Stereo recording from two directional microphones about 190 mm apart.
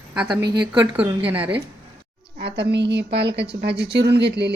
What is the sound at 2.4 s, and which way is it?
Speech, 60° right (ahead or behind).